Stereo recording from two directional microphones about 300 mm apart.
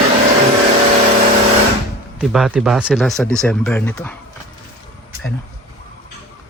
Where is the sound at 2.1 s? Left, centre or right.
Centre.